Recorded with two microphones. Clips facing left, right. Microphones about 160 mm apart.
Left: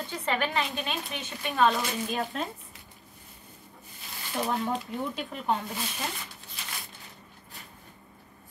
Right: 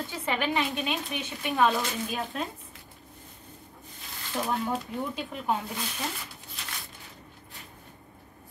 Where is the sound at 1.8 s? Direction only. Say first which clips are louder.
Left 1 dB; centre (ahead or behind).